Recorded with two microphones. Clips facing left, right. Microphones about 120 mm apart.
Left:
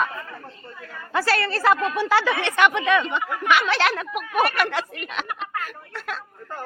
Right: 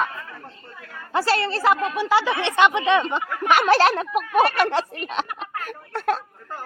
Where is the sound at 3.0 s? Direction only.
40° right (ahead or behind).